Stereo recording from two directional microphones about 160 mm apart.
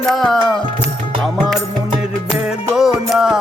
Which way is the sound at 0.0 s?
Centre (ahead or behind).